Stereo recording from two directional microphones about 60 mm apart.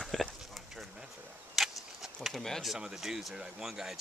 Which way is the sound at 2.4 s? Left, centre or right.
Centre.